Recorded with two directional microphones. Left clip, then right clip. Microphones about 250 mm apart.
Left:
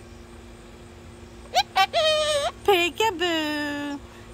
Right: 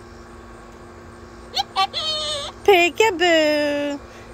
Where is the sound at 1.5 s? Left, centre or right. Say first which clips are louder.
Left 1 dB; centre.